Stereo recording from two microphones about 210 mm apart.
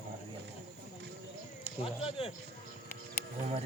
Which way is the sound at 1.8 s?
30° left (ahead or behind).